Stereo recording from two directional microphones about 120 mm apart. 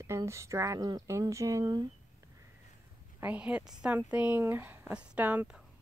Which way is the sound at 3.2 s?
15° right (ahead or behind).